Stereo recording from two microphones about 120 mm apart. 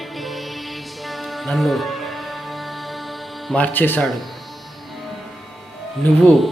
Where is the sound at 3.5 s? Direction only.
15° left (ahead or behind).